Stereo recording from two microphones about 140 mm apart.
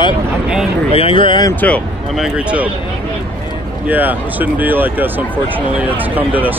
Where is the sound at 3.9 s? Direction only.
15° right (ahead or behind).